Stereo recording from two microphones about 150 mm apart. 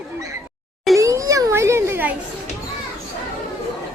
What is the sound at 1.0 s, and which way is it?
A child's voice, 20° right (ahead or behind).